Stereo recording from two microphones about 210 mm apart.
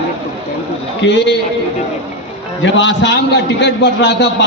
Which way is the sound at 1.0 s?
60° left (ahead or behind).